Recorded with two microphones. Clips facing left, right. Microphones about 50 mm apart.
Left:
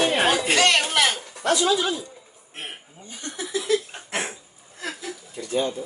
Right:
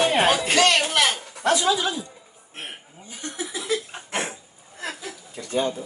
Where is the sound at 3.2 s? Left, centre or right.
Centre.